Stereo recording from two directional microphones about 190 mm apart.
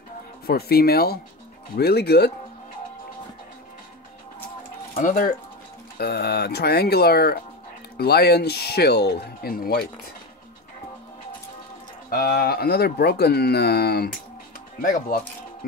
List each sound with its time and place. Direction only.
0.5 s speech: 55° left (ahead or behind)
4.9 s speech: 45° left (ahead or behind)
12.1 s speech: 50° left (ahead or behind)
14.8 s speech: 45° left (ahead or behind)